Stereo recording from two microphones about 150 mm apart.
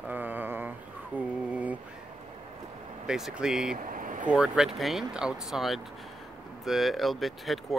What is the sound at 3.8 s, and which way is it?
Vehicle, 65° right (ahead or behind).